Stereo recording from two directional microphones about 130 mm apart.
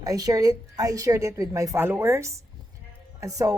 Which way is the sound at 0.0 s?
25° right (ahead or behind).